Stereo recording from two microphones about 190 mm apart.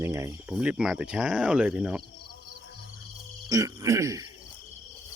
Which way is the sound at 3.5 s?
15° right (ahead or behind).